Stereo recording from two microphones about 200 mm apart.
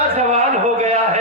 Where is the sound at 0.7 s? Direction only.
30° right (ahead or behind).